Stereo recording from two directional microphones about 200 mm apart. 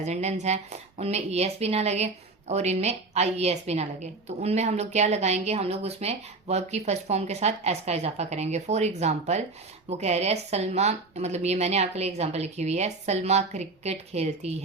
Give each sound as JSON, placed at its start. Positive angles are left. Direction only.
{"t": 0.0, "sound": "a woman's voice", "side_deg": -35}